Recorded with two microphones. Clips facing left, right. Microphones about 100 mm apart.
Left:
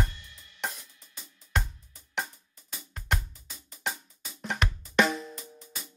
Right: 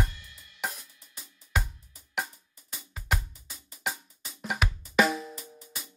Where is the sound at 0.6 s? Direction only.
5° right (ahead or behind).